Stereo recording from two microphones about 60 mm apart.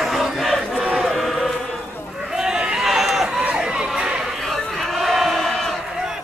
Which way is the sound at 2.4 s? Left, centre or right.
Centre.